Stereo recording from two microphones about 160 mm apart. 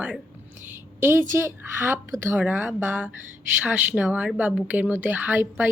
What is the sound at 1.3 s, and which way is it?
A woman's voice, 15° right (ahead or behind).